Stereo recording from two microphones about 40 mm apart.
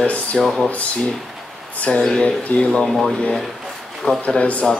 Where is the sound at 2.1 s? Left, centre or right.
Left.